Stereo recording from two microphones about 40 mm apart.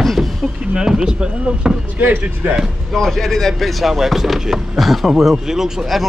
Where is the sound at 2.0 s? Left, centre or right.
Right.